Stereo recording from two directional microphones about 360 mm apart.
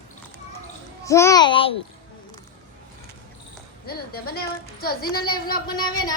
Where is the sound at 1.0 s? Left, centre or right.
Centre.